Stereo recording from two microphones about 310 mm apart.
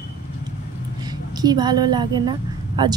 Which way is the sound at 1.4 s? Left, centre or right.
Centre.